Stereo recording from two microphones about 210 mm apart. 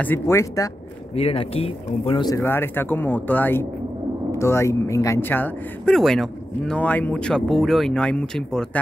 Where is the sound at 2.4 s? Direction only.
10° left (ahead or behind).